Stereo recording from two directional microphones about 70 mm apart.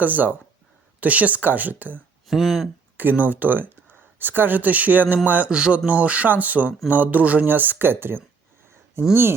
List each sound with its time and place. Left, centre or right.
0.0 s speech: right
2.2 s speech: centre
3.0 s speech: right